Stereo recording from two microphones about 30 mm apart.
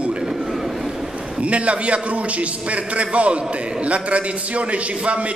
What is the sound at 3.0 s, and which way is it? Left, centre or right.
A man's voice, right.